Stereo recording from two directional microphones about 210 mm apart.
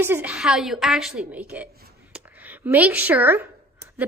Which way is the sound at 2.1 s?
10° right (ahead or behind).